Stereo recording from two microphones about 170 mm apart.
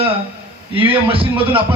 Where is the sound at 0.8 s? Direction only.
30° right (ahead or behind).